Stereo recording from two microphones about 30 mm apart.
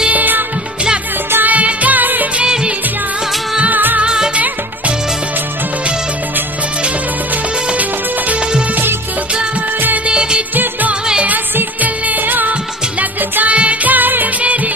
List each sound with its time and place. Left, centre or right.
0.1 s music: right
1.4 s music: right
2.4 s music: right
3.7 s music: right
4.0 s music: right
10.0 s music: right
10.5 s music: right
11.8 s music: right
13.5 s music: right
13.8 s music of bollywood: right
14.4 s music: right